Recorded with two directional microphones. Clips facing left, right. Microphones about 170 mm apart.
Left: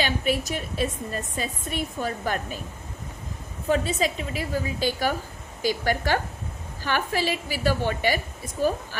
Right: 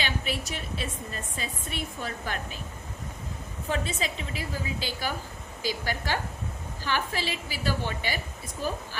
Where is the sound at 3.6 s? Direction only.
40° left (ahead or behind).